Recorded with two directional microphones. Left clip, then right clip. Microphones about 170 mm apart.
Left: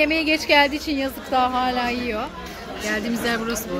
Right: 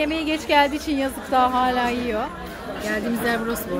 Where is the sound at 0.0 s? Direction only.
20° left (ahead or behind).